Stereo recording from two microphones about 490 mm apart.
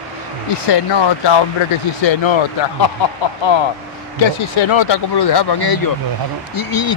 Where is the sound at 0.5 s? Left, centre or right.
Left.